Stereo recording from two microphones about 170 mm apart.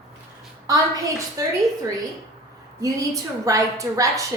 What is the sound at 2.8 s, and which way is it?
A woman's voice, 20° right (ahead or behind).